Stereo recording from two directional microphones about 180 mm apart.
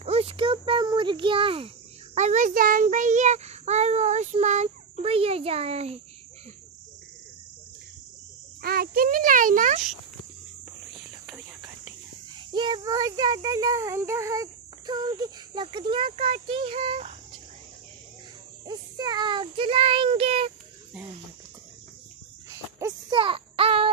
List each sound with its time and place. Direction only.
0.0 s a sound: 35° right (ahead or behind)
2.1 s a child's voice: 40° right (ahead or behind)
8.6 s a child's voice: 55° right (ahead or behind)
12.4 s a child's voice: 25° right (ahead or behind)
18.7 s a child's voice: 25° right (ahead or behind)
22.5 s a sound: 20° right (ahead or behind)